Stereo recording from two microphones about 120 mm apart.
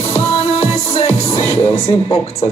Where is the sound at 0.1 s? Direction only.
55° left (ahead or behind).